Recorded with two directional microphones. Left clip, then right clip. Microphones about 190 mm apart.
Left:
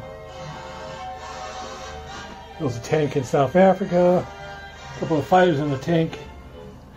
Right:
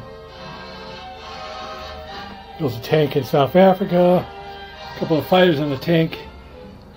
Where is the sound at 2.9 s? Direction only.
15° right (ahead or behind).